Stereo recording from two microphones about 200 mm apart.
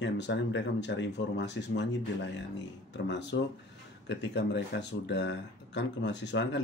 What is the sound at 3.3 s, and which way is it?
Speech, 65° left (ahead or behind).